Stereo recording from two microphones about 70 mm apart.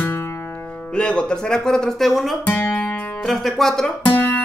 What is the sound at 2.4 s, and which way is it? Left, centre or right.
Music, left.